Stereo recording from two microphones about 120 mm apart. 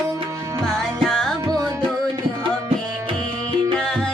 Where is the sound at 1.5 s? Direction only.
30° right (ahead or behind).